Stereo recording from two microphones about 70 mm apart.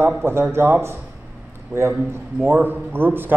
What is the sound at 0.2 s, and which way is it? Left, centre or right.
Speech, right.